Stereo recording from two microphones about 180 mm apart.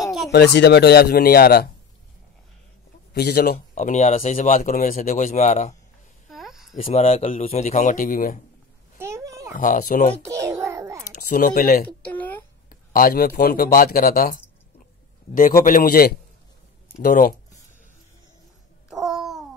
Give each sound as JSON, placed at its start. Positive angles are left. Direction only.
{"t": 0.3, "sound": "speech", "side_deg": 70}
{"t": 3.1, "sound": "a man's voice", "side_deg": 60}
{"t": 3.5, "sound": "speech", "side_deg": 45}
{"t": 4.4, "sound": "speech", "side_deg": 50}
{"t": 6.2, "sound": "a sound", "side_deg": 0}
{"t": 6.8, "sound": "speech", "side_deg": 35}
{"t": 8.9, "sound": "a sound", "side_deg": -15}
{"t": 9.5, "sound": "speech", "side_deg": 45}
{"t": 10.4, "sound": "a sound", "side_deg": -15}
{"t": 11.1, "sound": "speech", "side_deg": 55}
{"t": 12.1, "sound": "a sound", "side_deg": 10}
{"t": 12.6, "sound": "speech", "side_deg": 50}
{"t": 15.6, "sound": "speech", "side_deg": 55}
{"t": 18.9, "sound": "babbling", "side_deg": 0}